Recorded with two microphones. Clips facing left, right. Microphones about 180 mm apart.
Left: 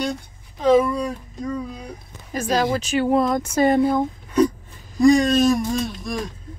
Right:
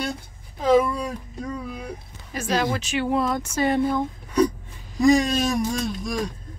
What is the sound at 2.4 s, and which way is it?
Speech, 40° left (ahead or behind).